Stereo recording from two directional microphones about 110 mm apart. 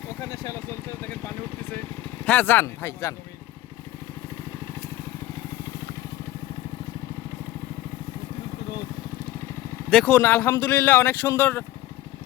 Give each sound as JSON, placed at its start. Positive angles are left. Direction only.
{"t": 0.2, "sound": "vehicle", "side_deg": 30}
{"t": 2.2, "sound": "a man's voice", "side_deg": 15}
{"t": 9.9, "sound": "a man's voice", "side_deg": 10}